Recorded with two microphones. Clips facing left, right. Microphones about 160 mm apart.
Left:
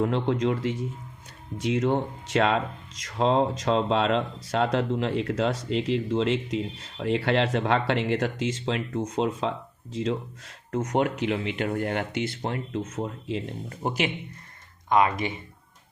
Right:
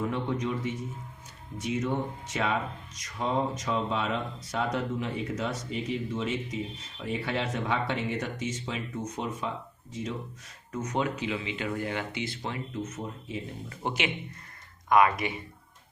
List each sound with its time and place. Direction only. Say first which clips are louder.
0.0 s speech: left 6 dB; 80° left
3.1 s speech: left 6 dB; 85° left
10.7 s speech: left 5 dB; 60° left (ahead or behind); by 13.4 s 80° left
13.7 s speech: left 4 dB; 40° left (ahead or behind)
14.8 s speech: even; 25° left (ahead or behind)